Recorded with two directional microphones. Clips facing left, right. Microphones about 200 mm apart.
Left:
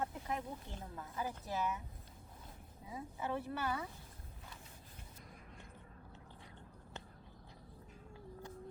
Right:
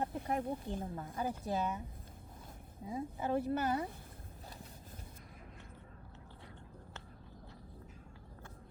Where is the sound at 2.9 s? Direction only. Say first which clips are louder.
Right 5 dB; 35° right (ahead or behind).